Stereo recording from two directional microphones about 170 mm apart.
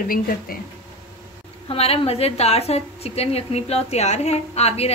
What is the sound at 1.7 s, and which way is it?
A woman's voice, 35° left (ahead or behind).